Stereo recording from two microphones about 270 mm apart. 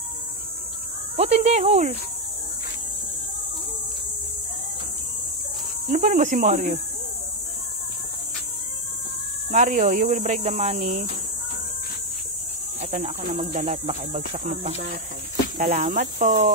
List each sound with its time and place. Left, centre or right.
1.1 s speech: right
5.9 s speech: right
9.5 s speech: right
12.9 s speech: right